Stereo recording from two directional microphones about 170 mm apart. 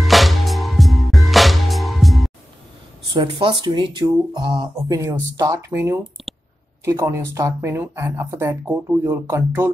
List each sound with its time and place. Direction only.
0.0 s music: centre (ahead or behind)
3.1 s speech: 30° right (ahead or behind)
4.7 s speech: 15° right (ahead or behind)